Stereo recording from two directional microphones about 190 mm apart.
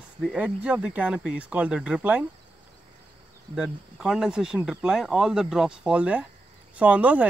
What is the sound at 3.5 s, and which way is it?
Speech, 5° right (ahead or behind).